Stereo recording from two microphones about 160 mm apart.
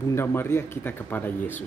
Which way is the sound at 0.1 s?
15° left (ahead or behind).